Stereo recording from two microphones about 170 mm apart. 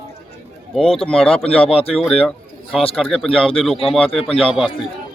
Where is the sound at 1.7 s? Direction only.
35° left (ahead or behind).